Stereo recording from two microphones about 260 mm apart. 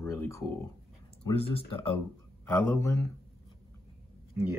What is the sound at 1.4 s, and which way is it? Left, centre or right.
Speech, left.